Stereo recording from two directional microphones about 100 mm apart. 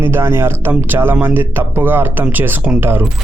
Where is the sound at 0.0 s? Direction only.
25° right (ahead or behind).